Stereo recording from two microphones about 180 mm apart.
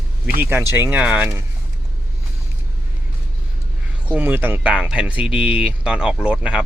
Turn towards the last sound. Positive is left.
turn(degrees=-5)  # may be behind; listen again after turning